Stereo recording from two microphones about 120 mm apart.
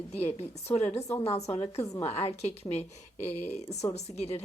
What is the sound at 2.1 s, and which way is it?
Speech, 60° left (ahead or behind).